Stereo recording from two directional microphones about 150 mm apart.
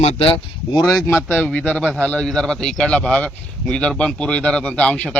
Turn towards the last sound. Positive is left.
turn(degrees=10)  # may be behind; listen again after turning